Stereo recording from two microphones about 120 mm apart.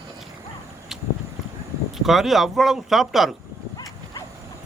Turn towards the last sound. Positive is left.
turn(degrees=0)  # may be behind; listen again after turning